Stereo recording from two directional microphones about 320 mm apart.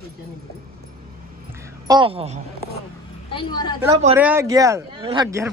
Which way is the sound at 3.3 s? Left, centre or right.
Centre.